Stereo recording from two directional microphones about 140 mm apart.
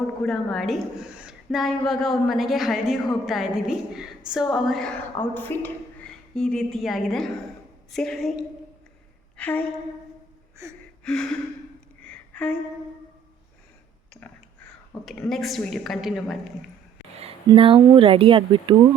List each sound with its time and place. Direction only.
0.2 s a woman's voice: 5° left (ahead or behind)
5.3 s a woman's voice: 15° left (ahead or behind)
9.4 s a woman's voice: 10° left (ahead or behind)
10.6 s gasp: 20° right (ahead or behind)
11.0 s gasp: 5° left (ahead or behind)
12.0 s a sound: 10° left (ahead or behind)
14.1 s a sound: 10° left (ahead or behind)
15.0 s a woman's voice: centre (ahead or behind)
17.2 s speech: 45° right (ahead or behind)